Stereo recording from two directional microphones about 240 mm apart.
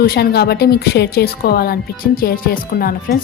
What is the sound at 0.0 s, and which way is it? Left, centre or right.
A woman's voice, left.